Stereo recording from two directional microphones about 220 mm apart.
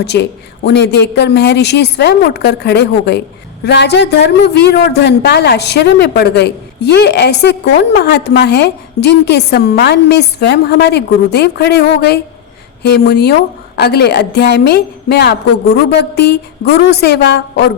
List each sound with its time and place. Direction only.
0.0 s a man's voice: 50° left (ahead or behind)